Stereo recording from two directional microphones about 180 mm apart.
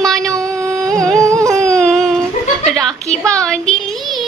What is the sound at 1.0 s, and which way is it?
Carnatic music, 15° right (ahead or behind).